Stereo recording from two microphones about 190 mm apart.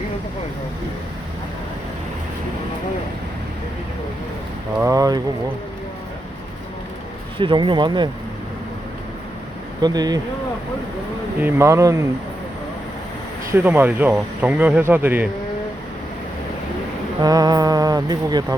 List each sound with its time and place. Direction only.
4.8 s speech: 15° right (ahead or behind)
7.3 s speech: 25° right (ahead or behind)
9.8 s speech: 20° right (ahead or behind)
11.3 s speech: 10° right (ahead or behind)
13.5 s speech: 10° right (ahead or behind)
17.2 s speech: 20° right (ahead or behind)